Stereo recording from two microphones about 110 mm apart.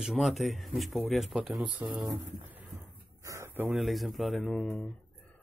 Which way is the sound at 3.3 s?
30° right (ahead or behind).